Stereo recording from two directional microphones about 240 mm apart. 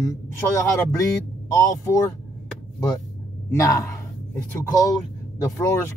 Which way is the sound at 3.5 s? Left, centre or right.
Centre.